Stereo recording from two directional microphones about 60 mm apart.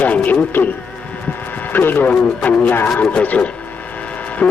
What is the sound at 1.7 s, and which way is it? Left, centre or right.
A man's voice, left.